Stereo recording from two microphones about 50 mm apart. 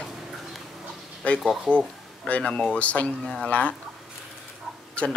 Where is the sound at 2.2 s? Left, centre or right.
Left.